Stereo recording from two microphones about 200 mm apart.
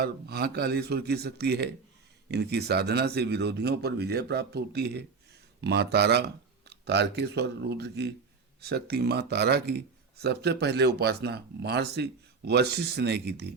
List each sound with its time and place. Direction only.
0.0 s speech: 50° right (ahead or behind)